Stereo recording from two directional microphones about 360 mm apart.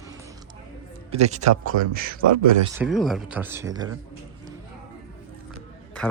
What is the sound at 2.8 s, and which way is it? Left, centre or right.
Speech, centre.